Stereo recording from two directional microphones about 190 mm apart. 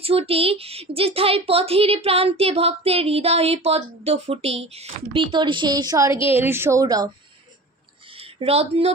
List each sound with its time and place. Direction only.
0.0 s a woman's voice: 30° right (ahead or behind)
8.2 s speech: 30° right (ahead or behind)